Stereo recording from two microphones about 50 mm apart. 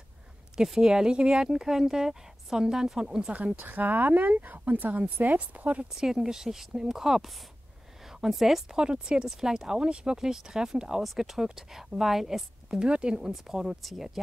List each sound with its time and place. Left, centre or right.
0.6 s speech: centre
3.5 s speech: right
5.9 s a woman's voice: centre
8.7 s speech: centre